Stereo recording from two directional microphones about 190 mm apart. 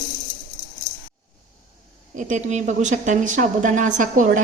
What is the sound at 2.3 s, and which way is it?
A woman's voice, 40° right (ahead or behind).